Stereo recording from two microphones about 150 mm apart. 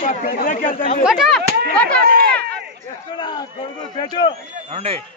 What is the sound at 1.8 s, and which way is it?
Speech, 70° right (ahead or behind).